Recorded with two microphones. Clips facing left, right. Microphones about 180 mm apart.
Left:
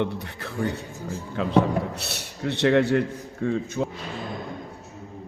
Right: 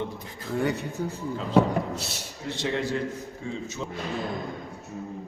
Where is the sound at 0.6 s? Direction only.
65° right (ahead or behind).